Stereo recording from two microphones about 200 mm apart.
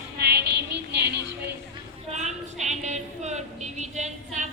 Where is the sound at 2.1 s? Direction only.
35° right (ahead or behind).